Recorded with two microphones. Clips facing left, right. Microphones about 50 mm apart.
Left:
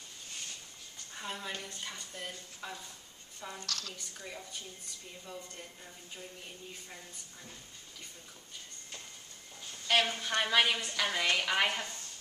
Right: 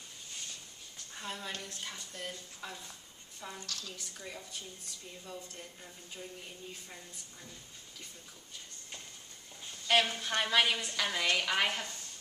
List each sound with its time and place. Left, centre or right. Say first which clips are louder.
1.1 s speech: left 1 dB; centre
3.6 s a woman's voice: left 3 dB; left
3.9 s a woman's voice: even; centre
9.8 s a woman's voice: even; centre